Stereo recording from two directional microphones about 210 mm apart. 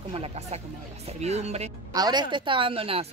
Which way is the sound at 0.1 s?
30° right (ahead or behind).